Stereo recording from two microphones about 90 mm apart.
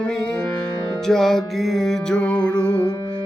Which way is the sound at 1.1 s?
5° left (ahead or behind).